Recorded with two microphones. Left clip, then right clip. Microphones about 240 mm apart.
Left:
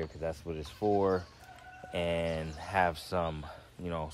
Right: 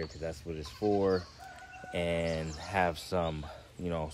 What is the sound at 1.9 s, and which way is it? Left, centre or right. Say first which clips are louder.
Speech: even; centre.